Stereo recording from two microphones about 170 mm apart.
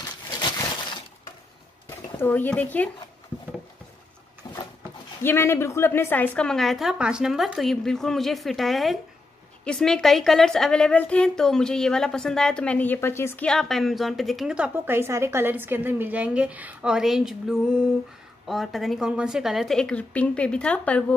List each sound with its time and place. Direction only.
0.0 s a sound: 25° left (ahead or behind)
2.1 s speech: 10° left (ahead or behind)
5.2 s a woman's voice: 15° left (ahead or behind)